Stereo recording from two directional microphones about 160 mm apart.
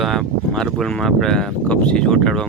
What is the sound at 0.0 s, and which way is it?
Speech, centre (ahead or behind).